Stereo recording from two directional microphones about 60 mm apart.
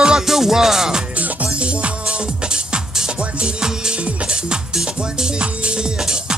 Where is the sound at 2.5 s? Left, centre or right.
Centre.